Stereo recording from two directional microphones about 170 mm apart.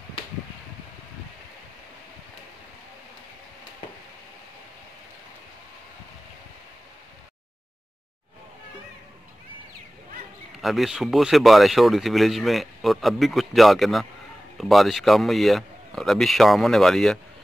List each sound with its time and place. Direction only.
10.6 s speech: centre (ahead or behind)